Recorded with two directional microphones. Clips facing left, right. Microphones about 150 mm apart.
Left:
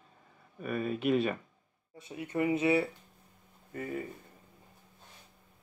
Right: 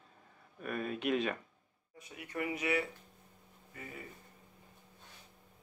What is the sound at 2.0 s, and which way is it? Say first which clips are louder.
Speech: left 8 dB; 25° left (ahead or behind).